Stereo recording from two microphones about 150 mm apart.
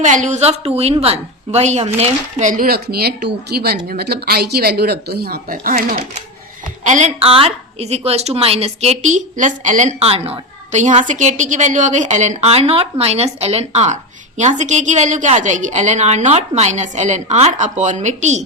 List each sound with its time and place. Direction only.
0.0 s a woman's voice: 55° right (ahead or behind); by 6.1 s 75° right (ahead or behind)
6.8 s a woman's voice: 50° right (ahead or behind)